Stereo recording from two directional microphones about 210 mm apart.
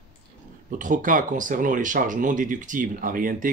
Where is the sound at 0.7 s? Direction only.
40° right (ahead or behind).